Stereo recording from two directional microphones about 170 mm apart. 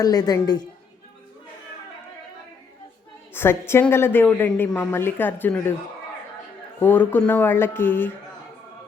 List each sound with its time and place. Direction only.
0.0 s a woman's voice: 20° left (ahead or behind)
3.3 s a woman's voice: 15° left (ahead or behind)
6.7 s a woman's voice: 10° left (ahead or behind)